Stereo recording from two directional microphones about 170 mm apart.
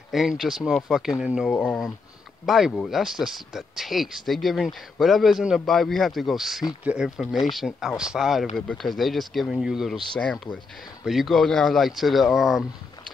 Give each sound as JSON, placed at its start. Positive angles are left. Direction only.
{"t": 0.1, "sound": "speech", "side_deg": 0}
{"t": 1.5, "sound": "speech", "side_deg": 10}
{"t": 2.4, "sound": "speech", "side_deg": 0}